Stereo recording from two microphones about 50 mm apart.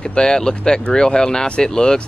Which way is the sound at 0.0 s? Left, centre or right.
Centre.